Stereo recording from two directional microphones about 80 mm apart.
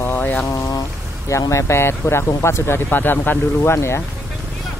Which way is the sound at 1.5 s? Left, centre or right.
Left.